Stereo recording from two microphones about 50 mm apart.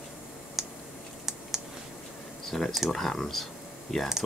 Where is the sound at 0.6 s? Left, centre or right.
Centre.